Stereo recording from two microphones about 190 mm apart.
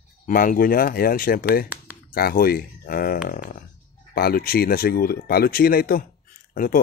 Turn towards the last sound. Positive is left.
turn(degrees=50)  # may be behind; listen again after turning